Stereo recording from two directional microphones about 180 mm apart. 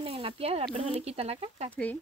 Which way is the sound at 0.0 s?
30° right (ahead or behind).